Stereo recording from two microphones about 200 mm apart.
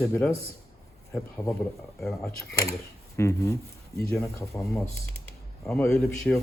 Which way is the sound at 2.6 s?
15° left (ahead or behind).